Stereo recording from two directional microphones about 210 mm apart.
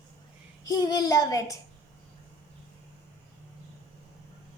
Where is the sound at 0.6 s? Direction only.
15° left (ahead or behind).